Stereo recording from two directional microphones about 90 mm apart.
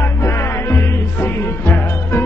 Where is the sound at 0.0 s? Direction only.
30° left (ahead or behind).